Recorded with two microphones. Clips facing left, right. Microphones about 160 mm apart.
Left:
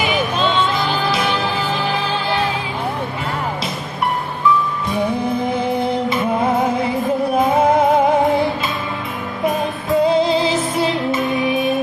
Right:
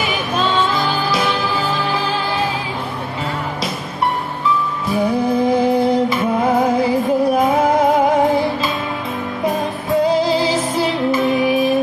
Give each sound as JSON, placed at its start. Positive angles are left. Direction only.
{"t": 10.0, "sound": "music", "side_deg": 25}